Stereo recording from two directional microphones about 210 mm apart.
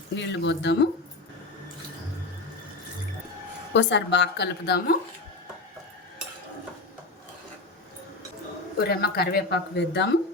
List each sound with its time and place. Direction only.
0.2 s a woman's voice: 60° left (ahead or behind)
3.7 s a woman's voice: 60° left (ahead or behind)
8.8 s speech: 50° left (ahead or behind)